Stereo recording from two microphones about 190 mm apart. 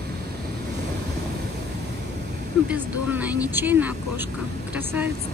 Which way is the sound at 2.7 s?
10° right (ahead or behind).